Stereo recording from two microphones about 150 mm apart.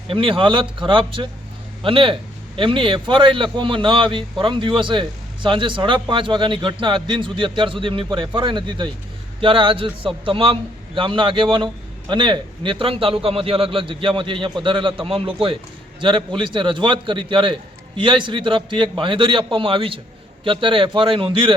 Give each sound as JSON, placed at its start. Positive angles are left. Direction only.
{"t": 0.1, "sound": "a man's voice", "side_deg": -35}